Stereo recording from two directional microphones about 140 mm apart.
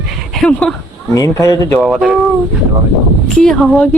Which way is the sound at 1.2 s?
25° left (ahead or behind).